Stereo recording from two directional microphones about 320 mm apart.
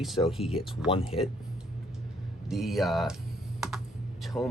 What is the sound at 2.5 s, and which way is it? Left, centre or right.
Speech, centre.